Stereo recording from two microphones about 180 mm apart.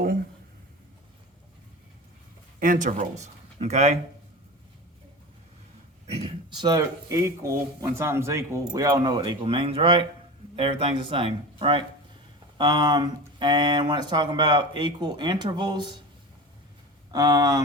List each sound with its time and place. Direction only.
2.6 s speech: 45° right (ahead or behind)
6.1 s a sound: 35° right (ahead or behind)
6.7 s speech: 20° right (ahead or behind)
17.1 s speech: 20° right (ahead or behind)